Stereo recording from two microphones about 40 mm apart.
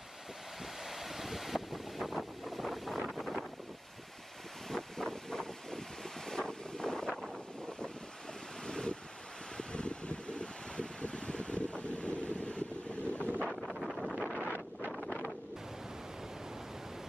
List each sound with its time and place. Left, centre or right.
0.8 s wind noise: centre
4.6 s wind noise: centre
8.6 s waves: left
9.6 s wind: left
13.4 s wind noise: centre